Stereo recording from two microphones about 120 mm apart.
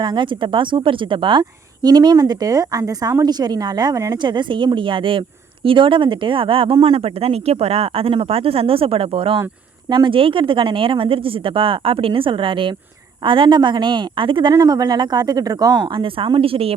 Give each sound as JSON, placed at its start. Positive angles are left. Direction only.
{"t": 0.0, "sound": "a woman's voice", "side_deg": -40}
{"t": 4.2, "sound": "a woman's voice", "side_deg": -40}
{"t": 14.5, "sound": "a woman's voice", "side_deg": -30}